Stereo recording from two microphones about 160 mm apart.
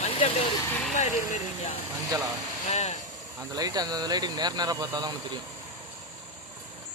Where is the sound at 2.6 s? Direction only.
45° left (ahead or behind).